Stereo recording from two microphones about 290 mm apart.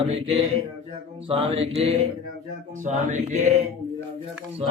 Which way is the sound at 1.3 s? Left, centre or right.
Centre.